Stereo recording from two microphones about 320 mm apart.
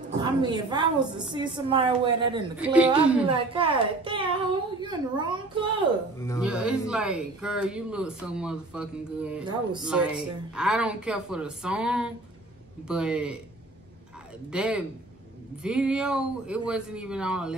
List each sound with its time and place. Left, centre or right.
0.2 s a woman's voice: centre
2.6 s speech: centre
3.3 s a woman's voice: centre
6.1 s speech: centre
6.4 s speech: centre
14.5 s speech: centre